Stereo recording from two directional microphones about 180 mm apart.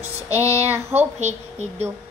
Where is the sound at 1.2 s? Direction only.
40° right (ahead or behind).